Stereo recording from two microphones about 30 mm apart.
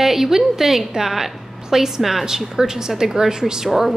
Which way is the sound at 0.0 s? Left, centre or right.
Centre.